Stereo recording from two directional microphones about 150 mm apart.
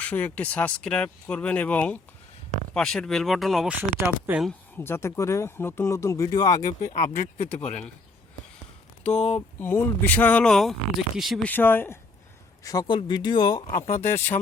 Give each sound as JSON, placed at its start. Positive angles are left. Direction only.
{"t": 0.0, "sound": "speech", "side_deg": 10}
{"t": 3.8, "sound": "speech", "side_deg": -10}
{"t": 4.8, "sound": "speech", "side_deg": 15}
{"t": 6.7, "sound": "speech", "side_deg": 60}
{"t": 7.5, "sound": "speech", "side_deg": 5}
{"t": 9.2, "sound": "speech", "side_deg": 10}
{"t": 11.4, "sound": "speech", "side_deg": 15}
{"t": 12.6, "sound": "speech", "side_deg": 25}